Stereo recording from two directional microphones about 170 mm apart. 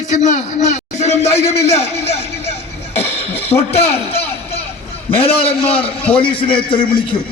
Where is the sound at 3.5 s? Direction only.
25° left (ahead or behind).